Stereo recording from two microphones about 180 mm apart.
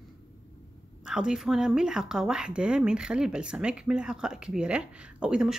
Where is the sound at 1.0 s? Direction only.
5° right (ahead or behind).